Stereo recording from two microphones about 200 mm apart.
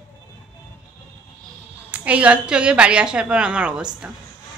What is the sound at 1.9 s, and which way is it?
A woman's voice, 5° right (ahead or behind).